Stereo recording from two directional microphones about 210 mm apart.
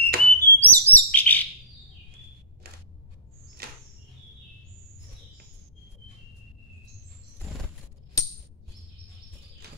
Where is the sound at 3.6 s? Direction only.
45° right (ahead or behind).